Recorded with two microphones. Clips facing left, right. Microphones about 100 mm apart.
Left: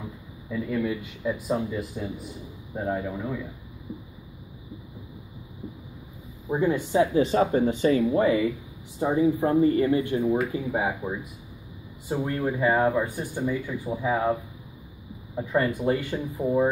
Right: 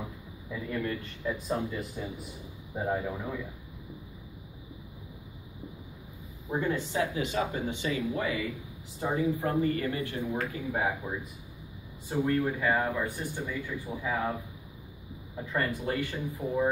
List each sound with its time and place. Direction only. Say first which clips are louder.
0.5 s speech: left 6 dB; 5° left (ahead or behind)
6.5 s speech: left 7 dB; 15° left (ahead or behind); by 8.5 s 35° left (ahead or behind)
9.1 s speech: left 7 dB; 20° left (ahead or behind)
15.3 s speech: left 7 dB; 15° left (ahead or behind)